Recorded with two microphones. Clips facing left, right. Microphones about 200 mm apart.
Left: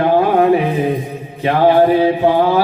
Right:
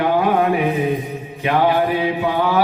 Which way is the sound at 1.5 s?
30° left (ahead or behind).